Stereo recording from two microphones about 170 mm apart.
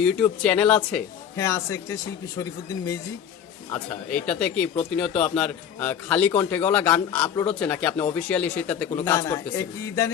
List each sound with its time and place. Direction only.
0.0 s speech: 5° left (ahead or behind)
1.4 s speech: 15° left (ahead or behind)
4.3 s speech: 5° left (ahead or behind)